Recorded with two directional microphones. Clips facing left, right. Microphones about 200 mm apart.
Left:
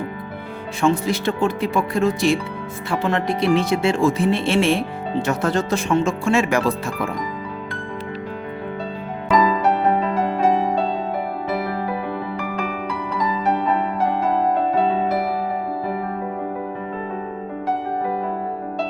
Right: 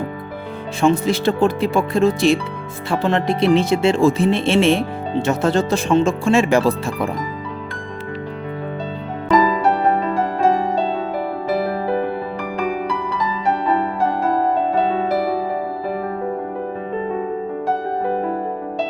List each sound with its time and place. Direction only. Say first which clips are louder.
0.8 s speech: right 3 dB; 25° right (ahead or behind)